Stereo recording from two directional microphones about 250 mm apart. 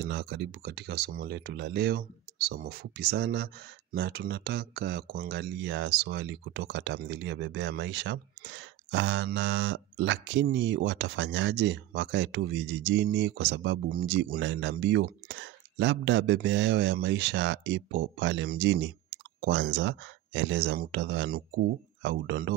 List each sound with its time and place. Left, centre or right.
0.0 s speech: right